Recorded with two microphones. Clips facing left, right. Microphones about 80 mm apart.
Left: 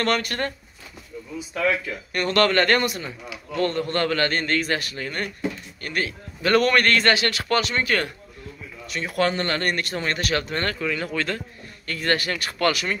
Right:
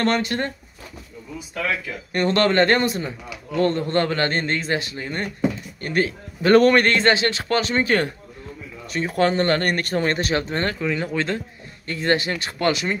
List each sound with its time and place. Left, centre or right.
0.0 s speech: right
2.1 s speech: right